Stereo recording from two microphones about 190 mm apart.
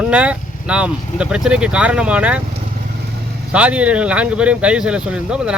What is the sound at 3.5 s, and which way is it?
Speech, 5° right (ahead or behind).